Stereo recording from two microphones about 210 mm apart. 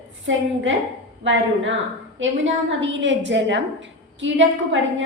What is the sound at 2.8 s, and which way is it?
A woman's voice, 60° right (ahead or behind).